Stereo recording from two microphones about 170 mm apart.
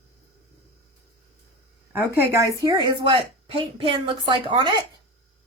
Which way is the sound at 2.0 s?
15° right (ahead or behind).